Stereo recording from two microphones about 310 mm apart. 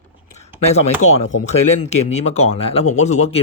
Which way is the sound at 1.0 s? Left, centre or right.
Left.